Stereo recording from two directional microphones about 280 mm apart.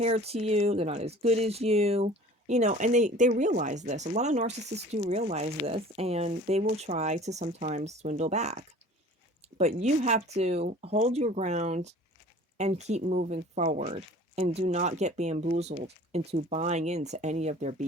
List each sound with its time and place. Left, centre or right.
0.0 s speech: right